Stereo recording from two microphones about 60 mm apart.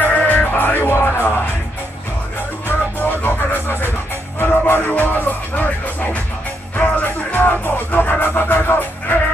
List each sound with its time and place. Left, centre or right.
0.0 s music: left
3.0 s music: left
6.8 s music: left